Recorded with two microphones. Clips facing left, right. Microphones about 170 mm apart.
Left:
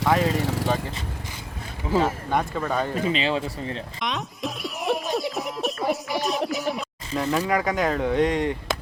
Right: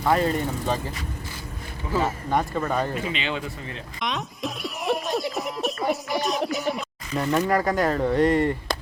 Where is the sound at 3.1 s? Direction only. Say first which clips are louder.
Left 4 dB; 35° left (ahead or behind).